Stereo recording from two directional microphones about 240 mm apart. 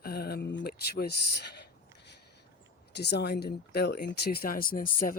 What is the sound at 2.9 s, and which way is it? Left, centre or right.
Speech, left.